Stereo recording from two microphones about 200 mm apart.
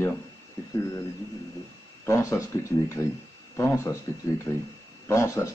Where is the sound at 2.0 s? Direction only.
15° left (ahead or behind).